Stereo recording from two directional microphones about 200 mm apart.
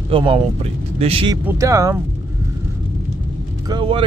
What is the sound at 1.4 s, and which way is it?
Speech, 15° right (ahead or behind).